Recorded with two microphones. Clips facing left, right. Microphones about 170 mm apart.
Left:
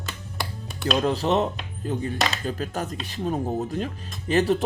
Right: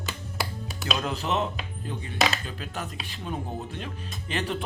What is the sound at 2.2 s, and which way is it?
Music, centre (ahead or behind).